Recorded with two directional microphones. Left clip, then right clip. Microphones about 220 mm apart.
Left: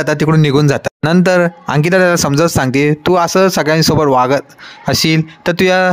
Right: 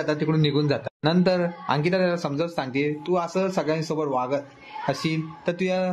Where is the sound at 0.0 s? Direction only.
50° left (ahead or behind).